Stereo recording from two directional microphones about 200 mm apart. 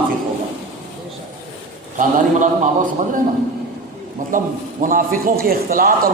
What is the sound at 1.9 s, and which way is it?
Speech, 40° right (ahead or behind).